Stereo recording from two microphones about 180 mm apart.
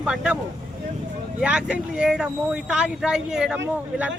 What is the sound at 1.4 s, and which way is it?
Speech, 5° right (ahead or behind).